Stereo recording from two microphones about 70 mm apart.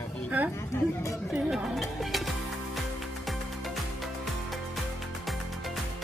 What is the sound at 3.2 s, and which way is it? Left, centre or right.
Music, centre.